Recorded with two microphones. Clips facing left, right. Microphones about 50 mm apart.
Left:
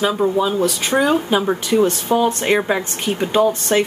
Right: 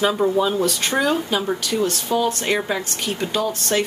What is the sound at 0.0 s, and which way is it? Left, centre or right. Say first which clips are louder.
Speech: left 1 dB; centre.